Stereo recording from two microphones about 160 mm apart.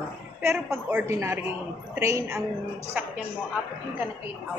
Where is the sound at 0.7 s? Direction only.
10° right (ahead or behind).